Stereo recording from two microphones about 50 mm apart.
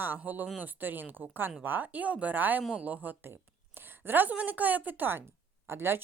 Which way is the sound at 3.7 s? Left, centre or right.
Right.